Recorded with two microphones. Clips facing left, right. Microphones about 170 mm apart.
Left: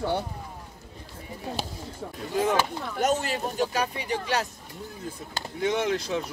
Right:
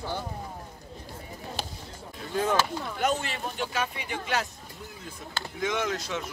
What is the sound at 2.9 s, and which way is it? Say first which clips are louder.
Speech: left 4 dB; 40° left (ahead or behind).